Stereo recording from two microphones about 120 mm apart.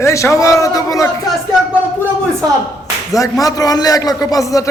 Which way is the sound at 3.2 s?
30° left (ahead or behind).